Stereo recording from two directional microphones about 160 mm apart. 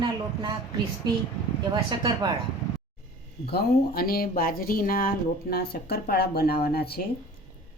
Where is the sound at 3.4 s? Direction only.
75° left (ahead or behind).